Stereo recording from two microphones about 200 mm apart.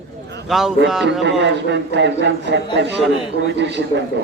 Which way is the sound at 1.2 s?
60° right (ahead or behind).